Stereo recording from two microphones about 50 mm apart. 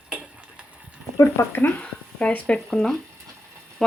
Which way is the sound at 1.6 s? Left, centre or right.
Left.